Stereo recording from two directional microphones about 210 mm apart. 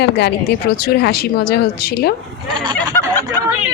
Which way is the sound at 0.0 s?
55° left (ahead or behind).